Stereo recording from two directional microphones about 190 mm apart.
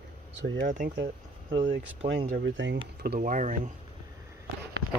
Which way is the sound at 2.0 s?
60° right (ahead or behind).